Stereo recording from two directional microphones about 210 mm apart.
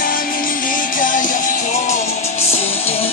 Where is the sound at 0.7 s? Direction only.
40° left (ahead or behind).